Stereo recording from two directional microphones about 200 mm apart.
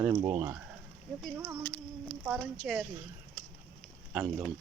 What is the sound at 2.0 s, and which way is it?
Speech, 5° right (ahead or behind).